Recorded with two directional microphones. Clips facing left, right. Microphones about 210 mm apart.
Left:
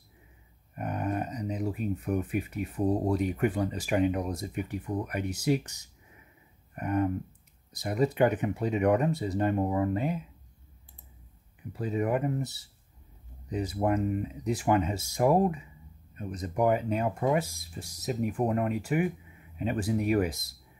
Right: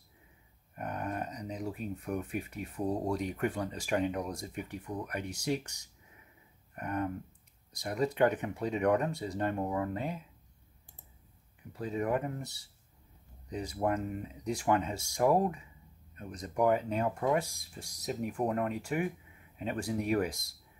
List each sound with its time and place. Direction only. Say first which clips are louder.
0.7 s speech: left 5 dB; 5° left (ahead or behind)
11.7 s speech: left 3 dB; 5° left (ahead or behind)